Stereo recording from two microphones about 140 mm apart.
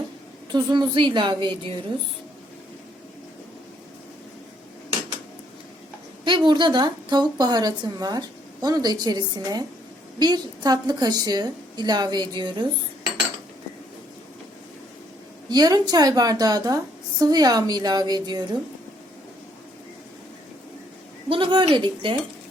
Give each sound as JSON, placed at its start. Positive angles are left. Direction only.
{"t": 0.5, "sound": "a woman's voice", "side_deg": -35}
{"t": 6.2, "sound": "a woman's voice", "side_deg": -35}
{"t": 15.4, "sound": "a woman's voice", "side_deg": -30}
{"t": 21.2, "sound": "a woman's voice", "side_deg": -35}